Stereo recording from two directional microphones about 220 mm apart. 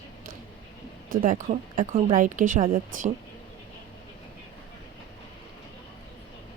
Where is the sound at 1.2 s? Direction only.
35° right (ahead or behind).